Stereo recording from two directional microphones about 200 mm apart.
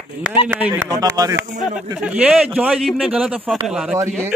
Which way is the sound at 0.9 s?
20° right (ahead or behind).